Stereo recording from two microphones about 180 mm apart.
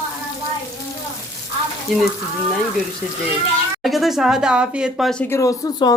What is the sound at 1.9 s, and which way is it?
Speech, centre (ahead or behind).